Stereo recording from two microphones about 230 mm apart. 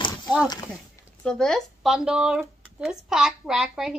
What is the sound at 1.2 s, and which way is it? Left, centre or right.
A woman's voice, centre.